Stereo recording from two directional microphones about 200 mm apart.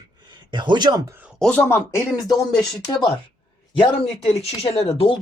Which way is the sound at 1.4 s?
5° left (ahead or behind).